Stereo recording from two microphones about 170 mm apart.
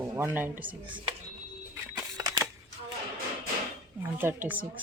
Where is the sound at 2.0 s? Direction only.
20° right (ahead or behind).